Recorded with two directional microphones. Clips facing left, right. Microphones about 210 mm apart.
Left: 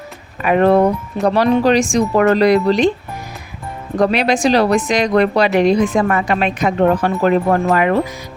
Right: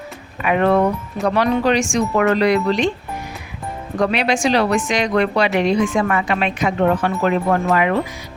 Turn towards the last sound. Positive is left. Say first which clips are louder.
# left 3 dB
turn(degrees=45)  # may be behind; listen again after turning